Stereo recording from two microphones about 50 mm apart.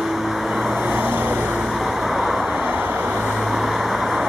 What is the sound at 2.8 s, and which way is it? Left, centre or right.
Vehicle, right.